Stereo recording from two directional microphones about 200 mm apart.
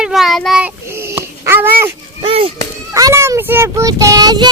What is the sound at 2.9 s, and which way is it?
A child's voice, 15° right (ahead or behind).